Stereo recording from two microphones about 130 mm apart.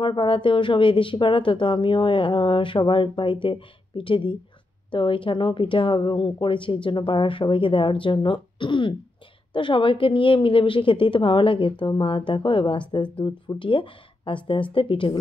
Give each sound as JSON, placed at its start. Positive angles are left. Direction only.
{"t": 0.0, "sound": "a woman's voice", "side_deg": 40}